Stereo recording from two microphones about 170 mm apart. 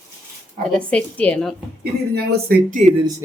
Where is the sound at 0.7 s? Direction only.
5° left (ahead or behind).